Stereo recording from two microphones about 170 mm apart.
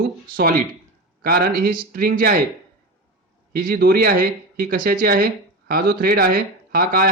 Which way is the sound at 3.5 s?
60° right (ahead or behind).